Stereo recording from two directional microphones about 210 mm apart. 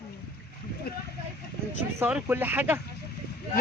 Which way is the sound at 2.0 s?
10° right (ahead or behind).